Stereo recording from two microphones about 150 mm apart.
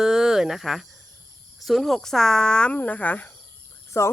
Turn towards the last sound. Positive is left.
turn(degrees=20)  # may be behind; listen again after turning